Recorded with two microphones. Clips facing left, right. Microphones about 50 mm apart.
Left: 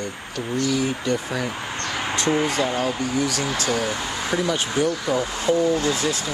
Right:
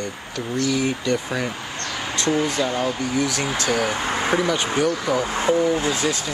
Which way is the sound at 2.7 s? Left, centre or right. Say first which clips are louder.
Right 1 dB; centre.